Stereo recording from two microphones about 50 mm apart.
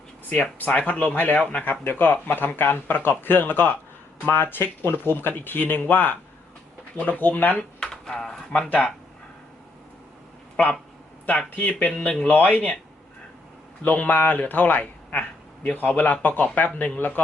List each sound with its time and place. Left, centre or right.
0.6 s speech: left
1.4 s speech: centre
1.8 s speech: left
7.5 s speech: centre
11.3 s speech: left
11.9 s speech: centre
12.3 s speech: left
13.8 s speech: left